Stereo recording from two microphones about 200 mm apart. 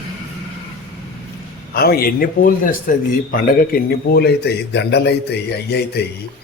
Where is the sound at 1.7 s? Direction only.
50° left (ahead or behind).